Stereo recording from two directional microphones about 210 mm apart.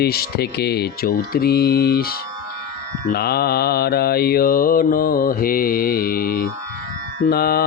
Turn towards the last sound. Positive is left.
turn(degrees=45)  # may be behind; listen again after turning